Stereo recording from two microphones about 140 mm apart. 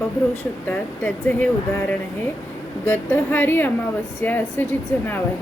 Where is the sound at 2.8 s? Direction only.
15° left (ahead or behind).